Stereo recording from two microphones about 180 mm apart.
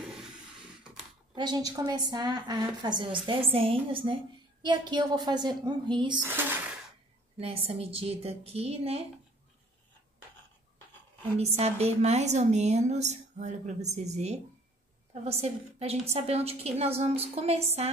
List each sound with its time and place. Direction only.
1.3 s a woman's voice: 25° right (ahead or behind)
7.3 s a woman's voice: 30° right (ahead or behind)
11.3 s a woman's voice: 35° right (ahead or behind)